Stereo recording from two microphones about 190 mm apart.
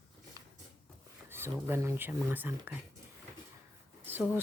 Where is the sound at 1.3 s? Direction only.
10° right (ahead or behind).